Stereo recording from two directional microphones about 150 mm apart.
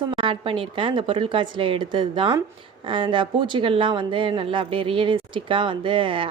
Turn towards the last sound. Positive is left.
turn(degrees=-35)  # may be behind; listen again after turning